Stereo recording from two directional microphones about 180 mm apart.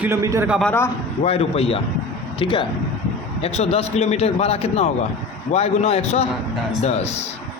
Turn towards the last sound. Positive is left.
turn(degrees=35)  # may be behind; listen again after turning